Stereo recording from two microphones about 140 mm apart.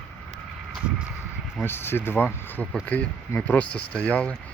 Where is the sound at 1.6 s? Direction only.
15° left (ahead or behind).